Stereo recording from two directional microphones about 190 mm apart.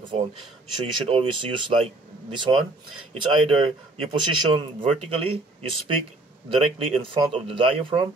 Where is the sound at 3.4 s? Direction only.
25° right (ahead or behind).